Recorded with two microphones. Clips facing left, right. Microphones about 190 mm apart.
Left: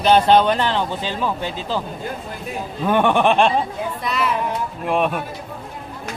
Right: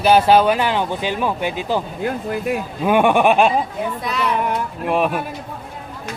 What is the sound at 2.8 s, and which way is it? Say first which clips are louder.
Speech: right 2 dB; 10° right (ahead or behind).